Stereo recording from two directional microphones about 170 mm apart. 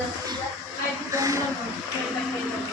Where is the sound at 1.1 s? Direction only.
20° right (ahead or behind).